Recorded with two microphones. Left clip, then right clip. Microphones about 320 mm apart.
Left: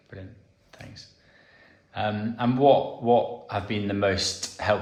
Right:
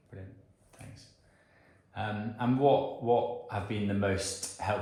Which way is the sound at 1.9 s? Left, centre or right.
Left.